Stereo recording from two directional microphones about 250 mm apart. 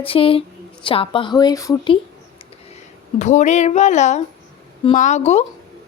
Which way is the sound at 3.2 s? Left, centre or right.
Left.